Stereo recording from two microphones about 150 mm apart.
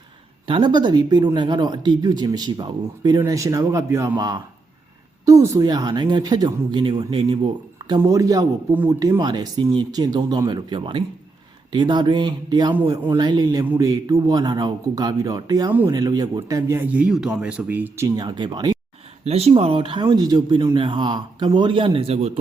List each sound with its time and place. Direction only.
0.4 s speech: 35° right (ahead or behind); by 18.1 s 15° right (ahead or behind)
18.2 s speech: 30° right (ahead or behind)
19.2 s speech: 45° right (ahead or behind)